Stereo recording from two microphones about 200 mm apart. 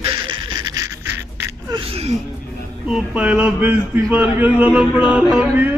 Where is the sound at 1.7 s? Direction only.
30° right (ahead or behind).